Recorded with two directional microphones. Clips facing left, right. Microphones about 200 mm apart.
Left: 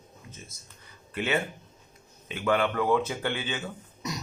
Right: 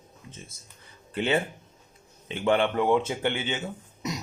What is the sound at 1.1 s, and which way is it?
Speech, 30° right (ahead or behind).